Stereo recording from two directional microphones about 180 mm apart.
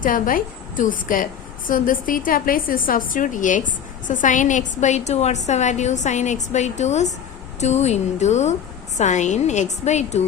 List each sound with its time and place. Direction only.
0.0 s a woman's voice: 50° left (ahead or behind)